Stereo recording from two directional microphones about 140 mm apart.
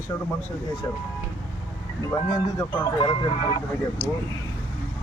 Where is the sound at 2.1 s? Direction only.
25° left (ahead or behind).